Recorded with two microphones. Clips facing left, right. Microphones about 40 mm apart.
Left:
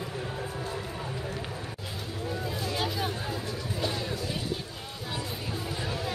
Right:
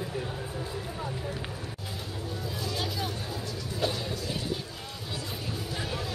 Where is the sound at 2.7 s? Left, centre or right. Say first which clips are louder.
Left 2 dB; centre.